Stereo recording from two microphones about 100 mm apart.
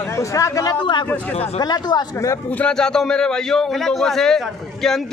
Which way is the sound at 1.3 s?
90° left.